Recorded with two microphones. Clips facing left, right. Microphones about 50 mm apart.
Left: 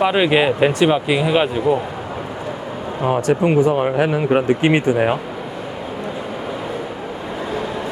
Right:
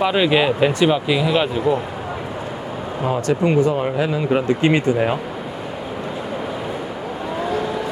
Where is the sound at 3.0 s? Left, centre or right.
Left.